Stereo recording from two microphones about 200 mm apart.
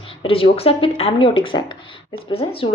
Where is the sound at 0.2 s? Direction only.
25° left (ahead or behind).